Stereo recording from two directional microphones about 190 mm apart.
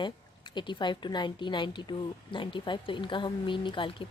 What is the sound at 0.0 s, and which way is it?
Speech, 25° left (ahead or behind).